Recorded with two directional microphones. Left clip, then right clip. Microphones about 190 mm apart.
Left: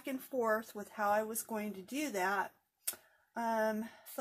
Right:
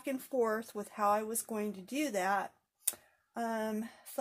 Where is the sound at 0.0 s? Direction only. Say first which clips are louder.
Right 3 dB; 40° right (ahead or behind).